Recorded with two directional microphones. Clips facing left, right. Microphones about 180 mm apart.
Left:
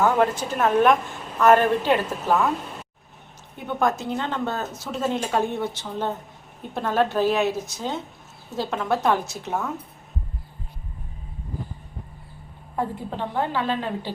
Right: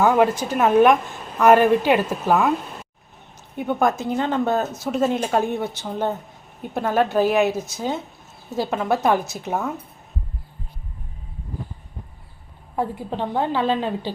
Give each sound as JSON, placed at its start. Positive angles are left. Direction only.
{"t": 0.0, "sound": "speech", "side_deg": -10}
{"t": 3.8, "sound": "speech", "side_deg": -10}
{"t": 12.7, "sound": "a woman's voice", "side_deg": -20}